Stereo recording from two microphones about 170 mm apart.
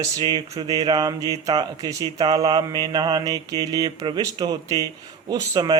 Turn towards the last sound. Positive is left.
turn(degrees=-25)  # may be behind; listen again after turning